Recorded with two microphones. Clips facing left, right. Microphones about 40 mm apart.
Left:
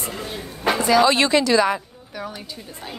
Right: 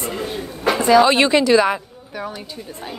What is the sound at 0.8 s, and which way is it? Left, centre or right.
Speech, right.